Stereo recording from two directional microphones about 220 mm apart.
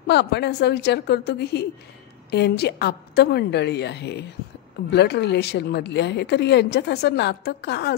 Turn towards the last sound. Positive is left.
turn(degrees=50)  # may be behind; listen again after turning